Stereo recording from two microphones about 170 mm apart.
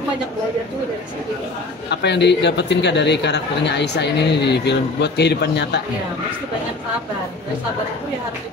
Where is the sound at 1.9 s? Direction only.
90° left.